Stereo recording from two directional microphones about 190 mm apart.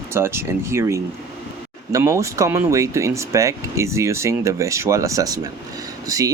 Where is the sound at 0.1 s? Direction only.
15° right (ahead or behind).